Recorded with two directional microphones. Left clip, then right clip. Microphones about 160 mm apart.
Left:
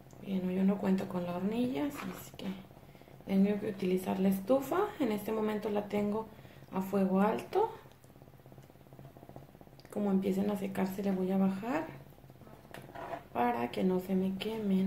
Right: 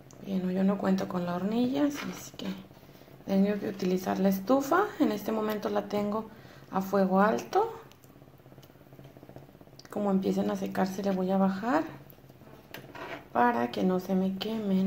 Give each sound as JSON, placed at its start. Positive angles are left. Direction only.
{"t": 0.6, "sound": "a woman's voice", "side_deg": -20}
{"t": 3.3, "sound": "a woman's voice", "side_deg": -25}
{"t": 9.9, "sound": "a woman's voice", "side_deg": -20}
{"t": 13.3, "sound": "a woman's voice", "side_deg": -20}